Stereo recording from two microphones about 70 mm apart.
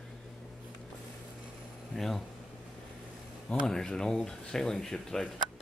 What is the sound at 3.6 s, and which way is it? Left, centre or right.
Speech, centre.